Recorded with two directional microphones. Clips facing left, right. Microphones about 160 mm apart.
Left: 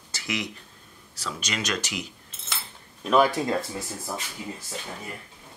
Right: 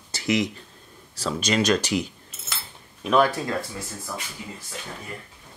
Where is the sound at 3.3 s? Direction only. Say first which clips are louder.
Left 2 dB; 20° left (ahead or behind).